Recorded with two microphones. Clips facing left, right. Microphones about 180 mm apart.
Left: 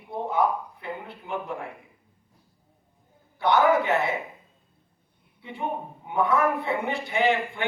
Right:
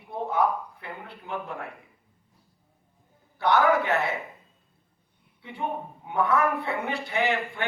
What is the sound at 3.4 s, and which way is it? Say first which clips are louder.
Speech: left 1 dB; 15° left (ahead or behind).